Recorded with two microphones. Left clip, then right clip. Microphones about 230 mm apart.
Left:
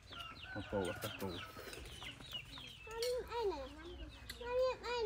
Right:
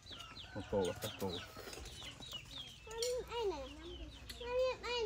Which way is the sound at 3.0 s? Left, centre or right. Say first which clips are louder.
Even; centre.